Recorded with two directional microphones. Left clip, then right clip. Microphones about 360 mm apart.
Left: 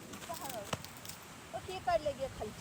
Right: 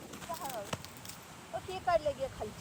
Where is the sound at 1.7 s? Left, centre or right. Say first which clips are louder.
Right 3 dB; centre.